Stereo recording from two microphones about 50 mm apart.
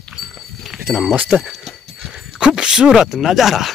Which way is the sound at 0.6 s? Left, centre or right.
Centre.